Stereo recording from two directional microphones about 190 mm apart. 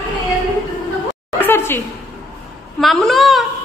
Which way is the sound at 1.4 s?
10° left (ahead or behind).